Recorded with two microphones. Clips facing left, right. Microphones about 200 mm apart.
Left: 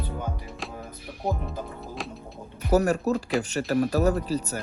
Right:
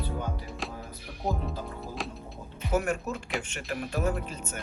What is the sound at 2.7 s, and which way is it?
Speech, 40° left (ahead or behind).